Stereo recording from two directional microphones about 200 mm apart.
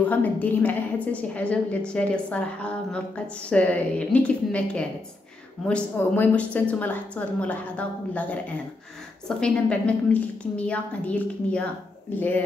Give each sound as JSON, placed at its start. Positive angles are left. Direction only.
{"t": 0.0, "sound": "a woman's voice", "side_deg": 10}